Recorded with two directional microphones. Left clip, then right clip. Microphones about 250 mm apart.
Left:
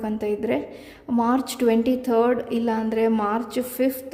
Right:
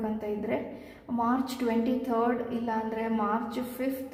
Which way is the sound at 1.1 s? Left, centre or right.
Left.